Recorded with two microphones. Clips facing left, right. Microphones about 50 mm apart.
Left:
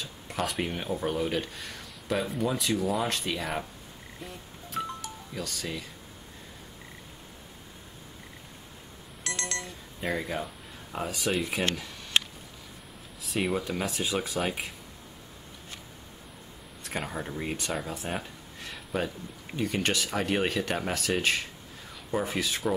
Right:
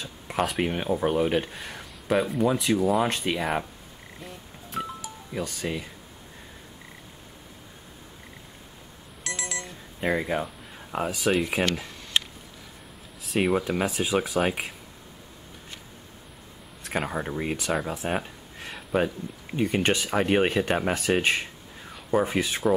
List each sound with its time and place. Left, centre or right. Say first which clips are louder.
0.0 s a sound: right 5 dB; centre
0.6 s speech: right 5 dB; centre
4.2 s music: right 1 dB; centre
5.3 s speech: right 6 dB; centre
9.2 s alarm clock: right 1 dB; centre
9.9 s speech: right 5 dB; centre
11.1 s speech: right 5 dB; centre
13.2 s speech: right 5 dB; centre
13.5 s speech: right 5 dB; centre
17.0 s speech: right 4 dB; centre
17.6 s speech: right 5 dB; centre
18.0 s a sound: right 6 dB; centre
18.9 s speech: right 6 dB; right